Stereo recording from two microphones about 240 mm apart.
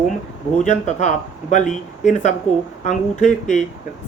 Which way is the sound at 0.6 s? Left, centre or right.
Left.